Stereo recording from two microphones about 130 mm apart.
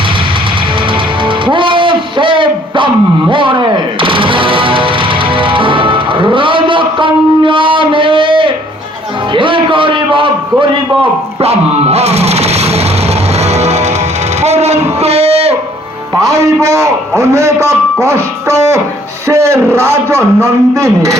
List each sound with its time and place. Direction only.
1.2 s music: 40° right (ahead or behind)
11.3 s music: 50° right (ahead or behind)
14.4 s a sound: 55° right (ahead or behind)
16.1 s a sound: 25° right (ahead or behind)
17.3 s a man's voice: 20° right (ahead or behind)
18.0 s music: 20° right (ahead or behind)
19.3 s a man's voice: 20° right (ahead or behind)